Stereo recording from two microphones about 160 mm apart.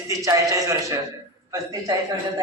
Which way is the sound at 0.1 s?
20° right (ahead or behind).